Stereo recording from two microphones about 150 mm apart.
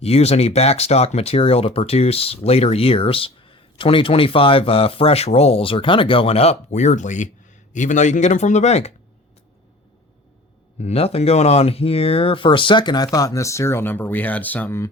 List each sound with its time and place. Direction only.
0.0 s speech: 45° left (ahead or behind)
10.8 s speech: 45° left (ahead or behind); by 14.8 s 15° left (ahead or behind)